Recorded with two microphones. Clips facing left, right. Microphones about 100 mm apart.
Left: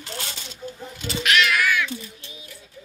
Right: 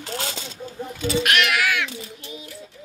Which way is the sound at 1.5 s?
80° right.